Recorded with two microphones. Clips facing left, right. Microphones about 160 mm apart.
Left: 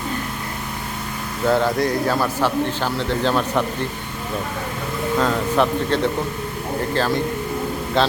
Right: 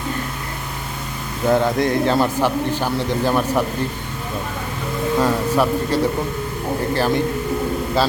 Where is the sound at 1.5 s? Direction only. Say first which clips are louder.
Right 2 dB; 20° right (ahead or behind).